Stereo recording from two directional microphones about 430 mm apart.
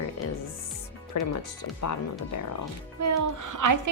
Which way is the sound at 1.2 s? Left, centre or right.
Left.